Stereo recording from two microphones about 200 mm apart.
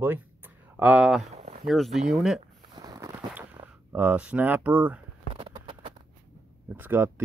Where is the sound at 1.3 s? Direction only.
30° right (ahead or behind).